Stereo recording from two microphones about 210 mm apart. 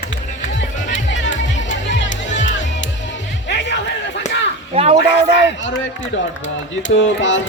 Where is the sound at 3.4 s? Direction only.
55° left (ahead or behind).